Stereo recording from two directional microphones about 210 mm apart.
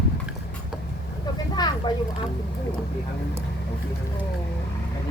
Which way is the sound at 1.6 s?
20° left (ahead or behind).